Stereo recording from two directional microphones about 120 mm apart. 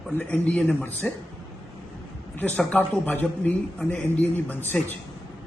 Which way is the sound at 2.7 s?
15° left (ahead or behind).